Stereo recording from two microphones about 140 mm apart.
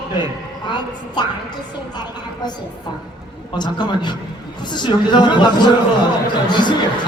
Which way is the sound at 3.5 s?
30° left (ahead or behind).